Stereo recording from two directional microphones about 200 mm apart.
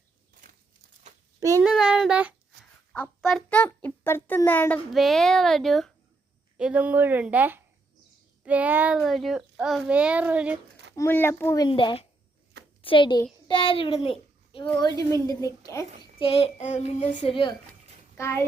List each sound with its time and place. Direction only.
1.4 s speech: 15° right (ahead or behind)
1.6 s a child's voice: 5° right (ahead or behind)
10.9 s a child's voice: 10° left (ahead or behind)
16.0 s speech: 25° left (ahead or behind)
18.2 s a child's voice: 10° left (ahead or behind)